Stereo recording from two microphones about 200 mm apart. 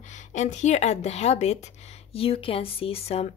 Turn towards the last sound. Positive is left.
turn(degrees=30)  # may be behind; listen again after turning